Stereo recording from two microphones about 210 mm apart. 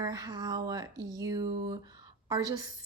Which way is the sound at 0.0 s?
20° right (ahead or behind).